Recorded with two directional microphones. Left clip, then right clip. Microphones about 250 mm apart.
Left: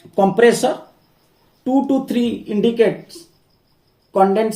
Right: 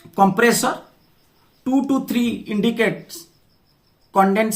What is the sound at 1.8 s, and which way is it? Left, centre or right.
Speech, right.